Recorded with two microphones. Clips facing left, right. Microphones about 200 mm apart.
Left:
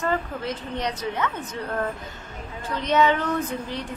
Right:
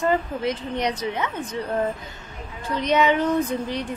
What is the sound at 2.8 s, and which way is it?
Speech, 15° right (ahead or behind).